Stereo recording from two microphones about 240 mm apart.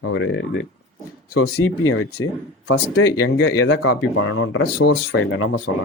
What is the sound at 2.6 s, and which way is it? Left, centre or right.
Speech, left.